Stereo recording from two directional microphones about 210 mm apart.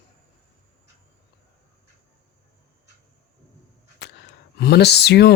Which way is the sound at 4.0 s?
55° left (ahead or behind).